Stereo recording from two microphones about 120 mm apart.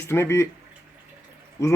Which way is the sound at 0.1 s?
20° left (ahead or behind).